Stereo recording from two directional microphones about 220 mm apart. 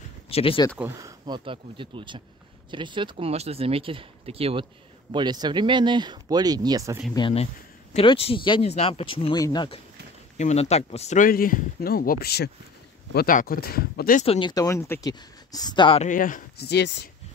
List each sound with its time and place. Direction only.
0.3 s speech: 25° left (ahead or behind)
0.7 s speech: 15° right (ahead or behind)
7.2 s speech: 25° left (ahead or behind)
10.3 s speech: 30° left (ahead or behind)
14.2 s speech: 25° left (ahead or behind)
16.1 s speech: 40° left (ahead or behind)